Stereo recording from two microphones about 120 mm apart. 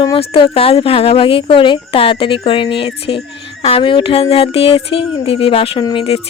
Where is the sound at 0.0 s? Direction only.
40° left (ahead or behind).